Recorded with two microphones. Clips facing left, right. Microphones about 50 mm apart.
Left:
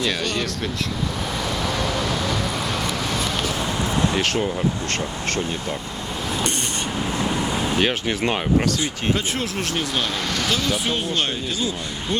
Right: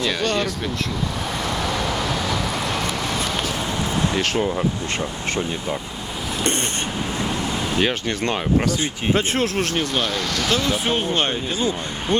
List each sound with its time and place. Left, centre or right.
0.0 s speech: centre
4.1 s speech: centre
7.8 s speech: centre
8.8 s speech: right
9.7 s speech: centre
10.5 s speech: right